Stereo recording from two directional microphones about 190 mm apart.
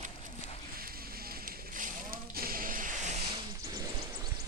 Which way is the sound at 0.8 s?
50° right (ahead or behind).